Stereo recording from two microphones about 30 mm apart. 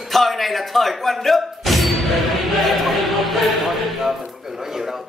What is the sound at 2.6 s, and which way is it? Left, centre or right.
Music, centre.